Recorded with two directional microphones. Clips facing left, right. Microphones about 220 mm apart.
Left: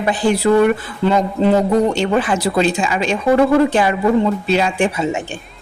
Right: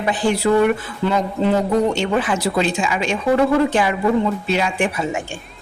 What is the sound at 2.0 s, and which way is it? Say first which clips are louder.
A woman's voice: left 3 dB; 35° left (ahead or behind).